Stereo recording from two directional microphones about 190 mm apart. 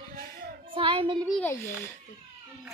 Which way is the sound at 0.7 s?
30° right (ahead or behind).